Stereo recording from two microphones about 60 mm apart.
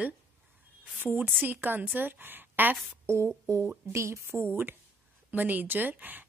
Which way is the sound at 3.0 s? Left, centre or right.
Right.